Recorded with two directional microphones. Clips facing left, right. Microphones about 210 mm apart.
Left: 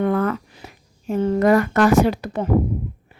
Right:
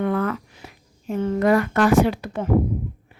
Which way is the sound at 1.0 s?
35° left (ahead or behind).